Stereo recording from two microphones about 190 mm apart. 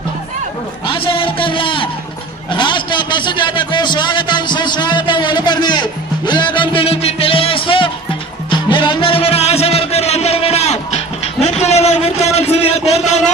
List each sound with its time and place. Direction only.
0.8 s music: 30° left (ahead or behind)
2.5 s a man's voice: 25° left (ahead or behind)
8.5 s music: 25° left (ahead or behind)
11.4 s a sound: 35° left (ahead or behind)